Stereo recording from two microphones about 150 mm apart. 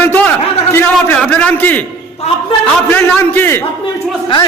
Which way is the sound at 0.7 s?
15° left (ahead or behind).